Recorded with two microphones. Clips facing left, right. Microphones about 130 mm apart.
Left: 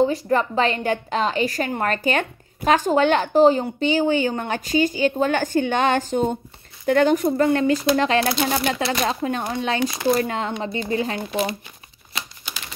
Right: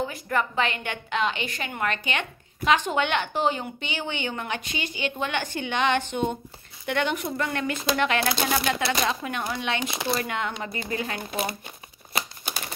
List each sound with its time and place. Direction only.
0.0 s a woman's voice: 30° left (ahead or behind)
12.1 s crumpling: 55° right (ahead or behind)